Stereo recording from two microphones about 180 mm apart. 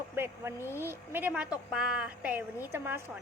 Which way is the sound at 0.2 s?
15° right (ahead or behind).